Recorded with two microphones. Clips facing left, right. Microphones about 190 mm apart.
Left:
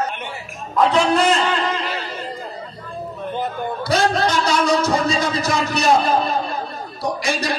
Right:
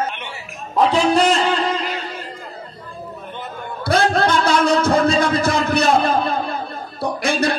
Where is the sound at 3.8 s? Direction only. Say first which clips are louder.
Right 2 dB; 55° right (ahead or behind).